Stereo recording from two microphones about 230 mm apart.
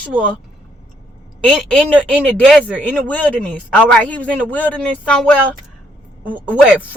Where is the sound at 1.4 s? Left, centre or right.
Centre.